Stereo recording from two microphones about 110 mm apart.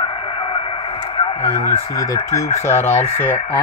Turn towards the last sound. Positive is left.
turn(degrees=75)  # may be behind; listen again after turning